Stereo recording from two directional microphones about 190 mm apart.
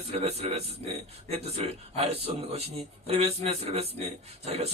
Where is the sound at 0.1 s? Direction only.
35° right (ahead or behind).